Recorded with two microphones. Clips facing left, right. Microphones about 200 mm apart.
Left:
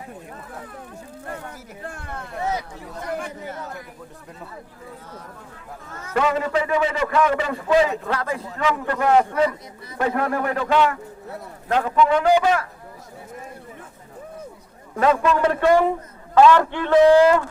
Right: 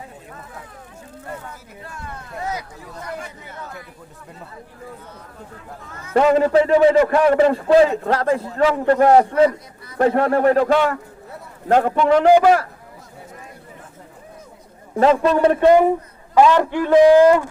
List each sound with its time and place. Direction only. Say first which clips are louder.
1.8 s speech: left 2 dB; 50° left (ahead or behind)
6.1 s a man's voice: right 7 dB; 35° right (ahead or behind)
6.9 s a man's voice: right 9 dB; 55° right (ahead or behind)
7.2 s a man's voice: right 6 dB; 40° right (ahead or behind)
11.9 s a man's voice: right 3 dB; 45° right (ahead or behind)
14.9 s a man's voice: right 4 dB; 30° right (ahead or behind)